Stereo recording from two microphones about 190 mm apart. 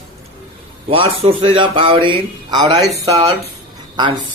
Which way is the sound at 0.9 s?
30° right (ahead or behind).